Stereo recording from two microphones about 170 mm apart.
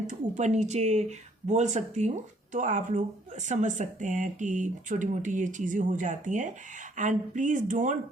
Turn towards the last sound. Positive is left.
turn(degrees=-50)  # may be behind; listen again after turning